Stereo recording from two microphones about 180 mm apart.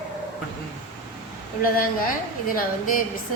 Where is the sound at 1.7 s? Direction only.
50° left (ahead or behind).